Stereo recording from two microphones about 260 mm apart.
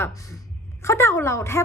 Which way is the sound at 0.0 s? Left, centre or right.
Centre.